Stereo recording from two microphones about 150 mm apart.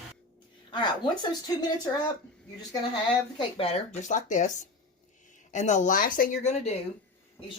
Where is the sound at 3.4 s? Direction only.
40° left (ahead or behind); by 4.5 s 55° left (ahead or behind).